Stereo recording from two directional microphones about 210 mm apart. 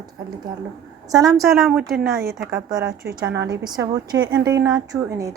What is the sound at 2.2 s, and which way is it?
Speech, 45° right (ahead or behind).